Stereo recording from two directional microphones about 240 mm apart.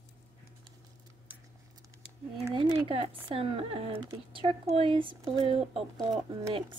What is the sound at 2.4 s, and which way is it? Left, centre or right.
Speech, right.